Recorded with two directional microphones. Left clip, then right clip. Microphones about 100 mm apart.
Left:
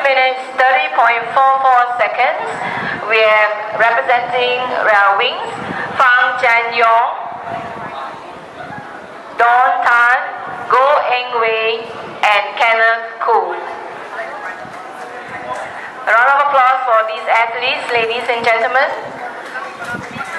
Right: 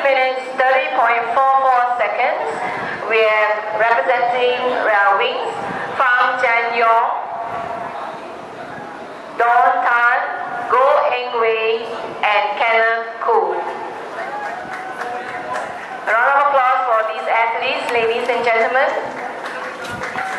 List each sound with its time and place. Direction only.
0.0 s a sound: 25° left (ahead or behind)
3.1 s a woman's voice: 25° left (ahead or behind)
6.4 s a woman's voice: 25° left (ahead or behind)
9.4 s a sound: 30° left (ahead or behind)
12.2 s a woman's voice: 25° left (ahead or behind)
16.1 s a woman's voice: 30° left (ahead or behind)